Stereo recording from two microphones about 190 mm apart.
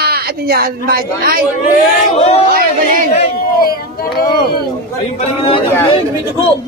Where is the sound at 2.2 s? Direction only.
30° left (ahead or behind).